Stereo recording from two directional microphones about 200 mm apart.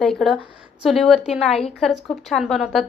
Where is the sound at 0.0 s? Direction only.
Centre (ahead or behind).